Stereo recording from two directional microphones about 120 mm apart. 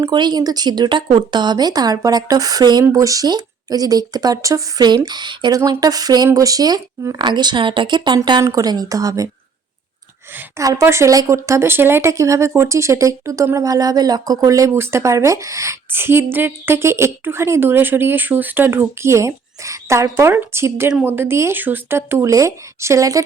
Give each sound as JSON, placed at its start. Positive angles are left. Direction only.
{"t": 0.0, "sound": "speech", "side_deg": -35}
{"t": 10.6, "sound": "speech", "side_deg": -25}